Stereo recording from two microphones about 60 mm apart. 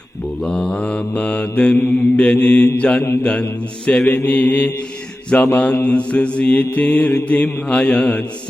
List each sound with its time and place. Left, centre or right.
0.4 s mantra: centre